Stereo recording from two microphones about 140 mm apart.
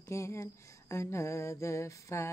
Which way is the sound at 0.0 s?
20° left (ahead or behind).